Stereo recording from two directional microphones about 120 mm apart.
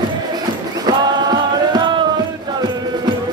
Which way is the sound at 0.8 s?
35° right (ahead or behind).